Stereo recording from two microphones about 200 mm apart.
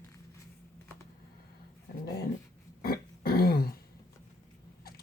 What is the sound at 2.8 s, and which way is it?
Throat clearing, 50° left (ahead or behind).